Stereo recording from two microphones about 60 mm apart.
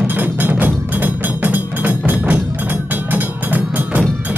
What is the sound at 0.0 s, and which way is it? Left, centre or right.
Music, right.